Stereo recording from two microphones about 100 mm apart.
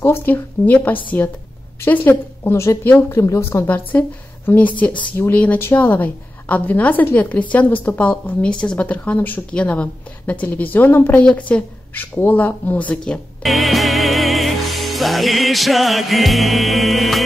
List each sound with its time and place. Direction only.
0.0 s a woman's voice: 20° left (ahead or behind)
2.6 s a woman's voice: 30° left (ahead or behind); by 17.2 s centre (ahead or behind)